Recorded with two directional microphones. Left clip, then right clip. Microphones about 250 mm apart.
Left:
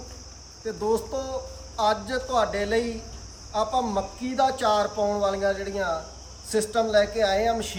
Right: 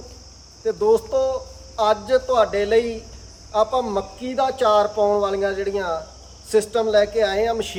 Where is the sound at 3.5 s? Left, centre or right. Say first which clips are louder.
Right 5 dB; right.